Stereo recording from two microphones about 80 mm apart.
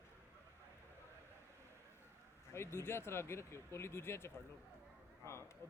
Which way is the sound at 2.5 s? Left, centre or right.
Left.